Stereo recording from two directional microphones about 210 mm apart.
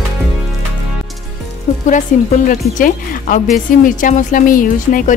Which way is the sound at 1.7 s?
35° left (ahead or behind).